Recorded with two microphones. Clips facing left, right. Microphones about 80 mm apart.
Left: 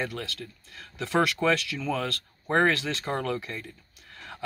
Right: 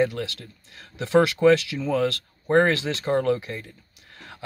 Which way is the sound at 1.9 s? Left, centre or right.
Centre.